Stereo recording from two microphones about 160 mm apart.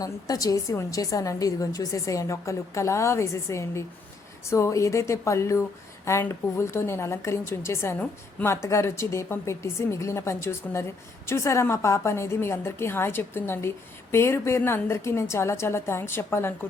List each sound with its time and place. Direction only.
0.0 s a woman's voice: 20° left (ahead or behind)